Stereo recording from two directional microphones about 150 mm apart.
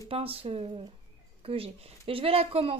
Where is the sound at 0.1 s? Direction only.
40° right (ahead or behind).